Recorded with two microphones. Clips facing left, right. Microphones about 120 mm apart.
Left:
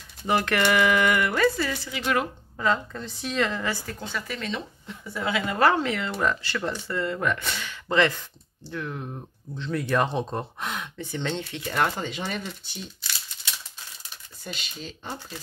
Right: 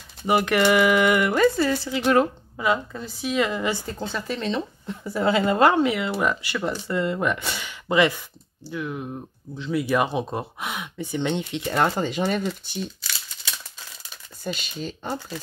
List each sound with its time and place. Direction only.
0.3 s a woman's voice: 10° right (ahead or behind); by 2.2 s 30° right (ahead or behind)
2.5 s speech: 10° right (ahead or behind)
3.8 s a woman's voice: 30° right (ahead or behind)
5.7 s speech: 15° right (ahead or behind); by 12.4 s 40° right (ahead or behind)
14.4 s speech: 45° right (ahead or behind)